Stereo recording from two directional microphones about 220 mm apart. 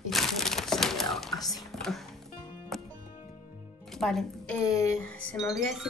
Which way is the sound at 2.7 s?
Centre (ahead or behind).